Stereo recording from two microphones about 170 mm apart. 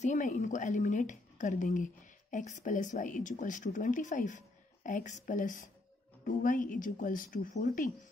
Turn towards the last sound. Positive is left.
turn(degrees=50)  # may be behind; listen again after turning